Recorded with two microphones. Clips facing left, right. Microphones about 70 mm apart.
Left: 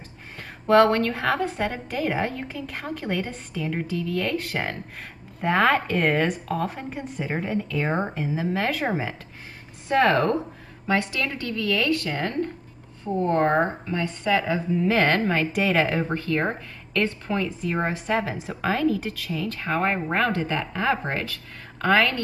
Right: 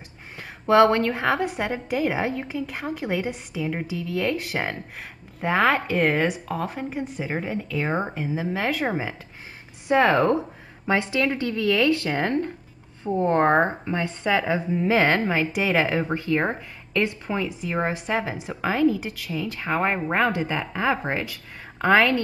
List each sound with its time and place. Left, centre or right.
0.4 s a woman's voice: centre
10.9 s a woman's voice: right